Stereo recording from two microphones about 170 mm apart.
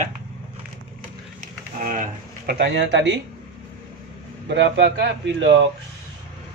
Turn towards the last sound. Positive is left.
turn(degrees=-90)